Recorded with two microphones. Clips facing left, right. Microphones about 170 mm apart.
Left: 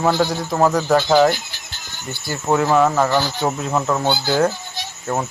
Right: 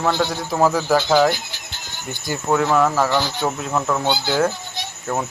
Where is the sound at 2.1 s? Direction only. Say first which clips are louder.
Right 1 dB; 15° right (ahead or behind).